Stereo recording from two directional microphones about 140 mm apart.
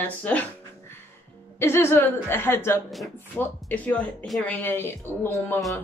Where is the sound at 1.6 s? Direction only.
15° left (ahead or behind).